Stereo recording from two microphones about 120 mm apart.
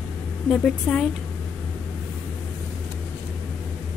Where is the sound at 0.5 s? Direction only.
5° left (ahead or behind).